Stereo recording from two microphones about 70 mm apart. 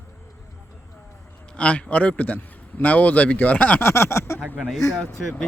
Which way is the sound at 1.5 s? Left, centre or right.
Centre.